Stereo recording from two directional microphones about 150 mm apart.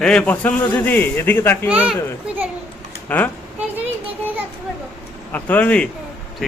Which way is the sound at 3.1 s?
10° left (ahead or behind).